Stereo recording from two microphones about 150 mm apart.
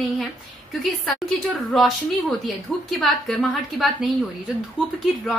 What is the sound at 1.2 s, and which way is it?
A woman's voice, centre (ahead or behind).